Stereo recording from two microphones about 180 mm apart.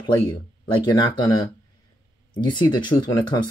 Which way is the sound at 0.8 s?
20° left (ahead or behind).